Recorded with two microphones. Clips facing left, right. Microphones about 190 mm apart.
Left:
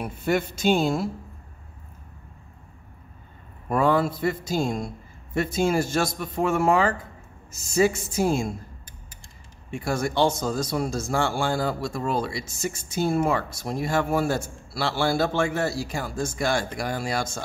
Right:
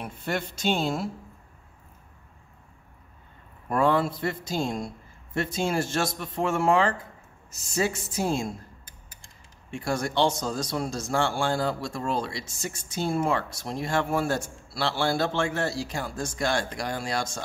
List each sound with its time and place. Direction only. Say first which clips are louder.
0.0 s a man's voice: left 6 dB; 5° left (ahead or behind)
3.6 s a man's voice: left 2 dB; 5° left (ahead or behind)
9.7 s a man's voice: left 2 dB; 5° left (ahead or behind)